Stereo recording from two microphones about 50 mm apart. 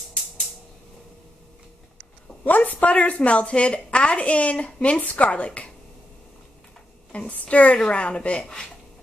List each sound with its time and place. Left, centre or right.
2.4 s a woman's voice: left
7.1 s a woman's voice: left